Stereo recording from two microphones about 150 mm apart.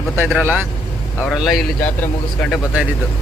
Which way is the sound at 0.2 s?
15° right (ahead or behind).